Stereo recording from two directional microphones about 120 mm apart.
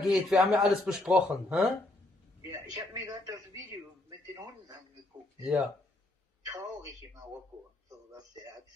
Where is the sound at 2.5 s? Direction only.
30° right (ahead or behind).